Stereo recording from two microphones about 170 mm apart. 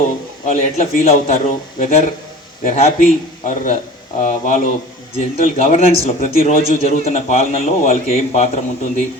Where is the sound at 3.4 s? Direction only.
50° left (ahead or behind).